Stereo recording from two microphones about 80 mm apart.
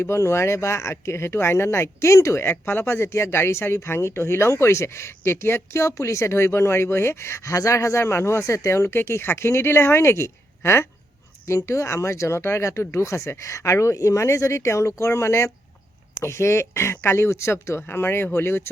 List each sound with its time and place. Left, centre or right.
0.0 s speech: left